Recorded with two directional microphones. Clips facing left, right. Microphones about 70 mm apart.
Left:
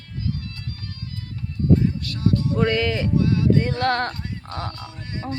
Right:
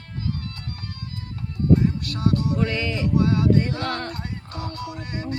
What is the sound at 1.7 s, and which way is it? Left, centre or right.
Music, right.